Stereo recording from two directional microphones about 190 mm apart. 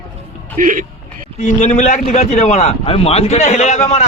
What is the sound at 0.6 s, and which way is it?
Speech, 45° right (ahead or behind).